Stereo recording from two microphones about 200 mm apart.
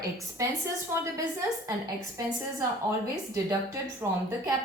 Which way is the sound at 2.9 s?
15° right (ahead or behind).